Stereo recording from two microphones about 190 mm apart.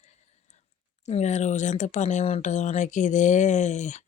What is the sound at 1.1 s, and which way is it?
Speech, 35° left (ahead or behind).